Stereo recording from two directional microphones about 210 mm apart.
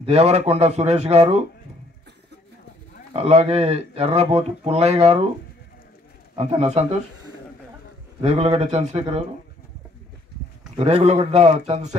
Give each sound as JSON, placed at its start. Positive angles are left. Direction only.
{"t": 0.0, "sound": "speech", "side_deg": -30}
{"t": 3.1, "sound": "speech", "side_deg": -30}
{"t": 6.3, "sound": "speech", "side_deg": -30}
{"t": 8.2, "sound": "speech", "side_deg": -30}
{"t": 10.8, "sound": "speech", "side_deg": -30}